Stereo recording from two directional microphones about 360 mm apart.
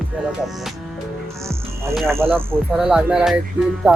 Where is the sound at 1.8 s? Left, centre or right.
Centre.